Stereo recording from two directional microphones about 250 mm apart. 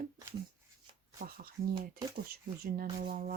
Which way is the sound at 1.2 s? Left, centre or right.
Right.